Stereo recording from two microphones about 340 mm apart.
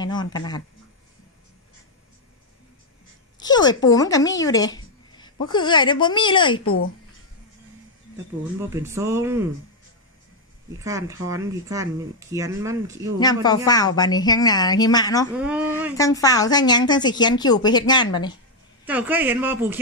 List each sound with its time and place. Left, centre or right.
0.0 s a woman's voice: centre
3.3 s a woman's voice: centre
6.6 s speech: left
8.5 s speech: centre
10.8 s speech: centre
13.2 s a woman's voice: centre
15.3 s a man's voice: centre
16.0 s a woman's voice: centre
18.9 s a man's voice: centre